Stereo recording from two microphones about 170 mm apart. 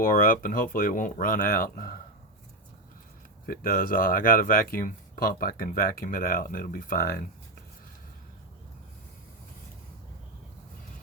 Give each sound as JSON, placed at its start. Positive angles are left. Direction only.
{"t": 0.0, "sound": "speech", "side_deg": 55}
{"t": 3.4, "sound": "speech", "side_deg": 60}